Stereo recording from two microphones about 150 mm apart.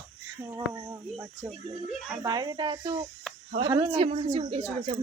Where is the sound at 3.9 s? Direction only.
45° right (ahead or behind).